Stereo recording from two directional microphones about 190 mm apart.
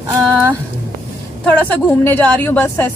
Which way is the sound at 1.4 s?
10° left (ahead or behind).